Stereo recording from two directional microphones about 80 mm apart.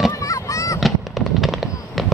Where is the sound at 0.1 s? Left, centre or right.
Left.